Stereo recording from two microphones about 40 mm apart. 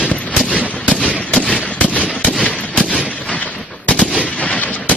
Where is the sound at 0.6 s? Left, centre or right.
Left.